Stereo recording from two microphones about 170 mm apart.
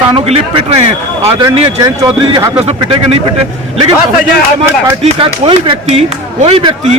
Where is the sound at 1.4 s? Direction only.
25° right (ahead or behind).